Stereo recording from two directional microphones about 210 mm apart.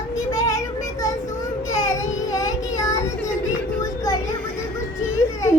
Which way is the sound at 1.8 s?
15° left (ahead or behind).